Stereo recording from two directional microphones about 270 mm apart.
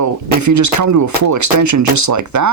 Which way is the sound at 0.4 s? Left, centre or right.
Right.